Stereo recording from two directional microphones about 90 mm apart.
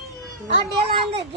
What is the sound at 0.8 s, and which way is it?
Speech, 90° right.